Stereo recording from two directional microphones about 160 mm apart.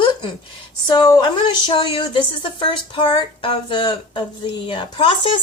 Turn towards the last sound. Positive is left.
turn(degrees=30)  # may be behind; listen again after turning